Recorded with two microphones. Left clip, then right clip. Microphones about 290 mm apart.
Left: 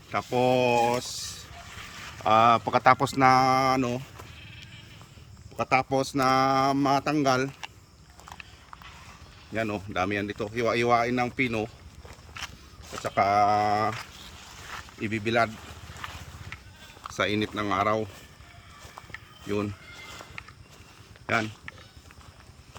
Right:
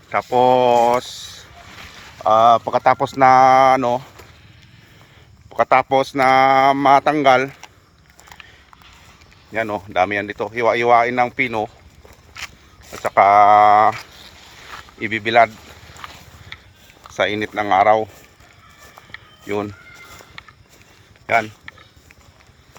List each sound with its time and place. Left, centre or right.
0.1 s speech: centre
2.2 s speech: centre
5.5 s speech: centre
9.6 s speech: centre
12.0 s a sound: right
13.1 s speech: centre
15.0 s speech: centre
15.5 s sizzle: right
17.2 s speech: centre